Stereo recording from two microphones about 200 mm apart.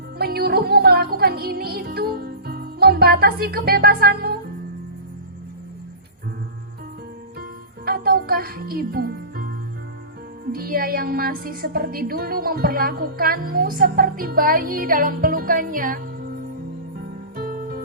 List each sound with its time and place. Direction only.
0.2 s music: 50° right (ahead or behind)
7.9 s music: 50° right (ahead or behind)
10.5 s a woman's voice: 50° right (ahead or behind)
17.3 s music: 45° right (ahead or behind)